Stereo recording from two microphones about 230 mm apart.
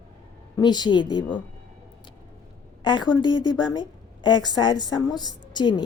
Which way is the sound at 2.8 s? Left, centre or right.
Centre.